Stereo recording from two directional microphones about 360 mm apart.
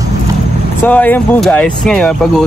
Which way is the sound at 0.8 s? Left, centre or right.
Centre.